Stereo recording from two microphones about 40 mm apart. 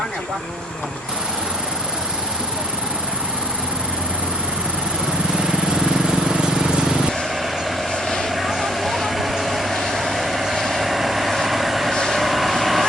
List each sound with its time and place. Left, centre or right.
5.4 s vehicle: centre
8.4 s vehicle: centre